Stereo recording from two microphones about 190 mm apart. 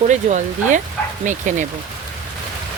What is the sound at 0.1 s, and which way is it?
Speech, 40° right (ahead or behind).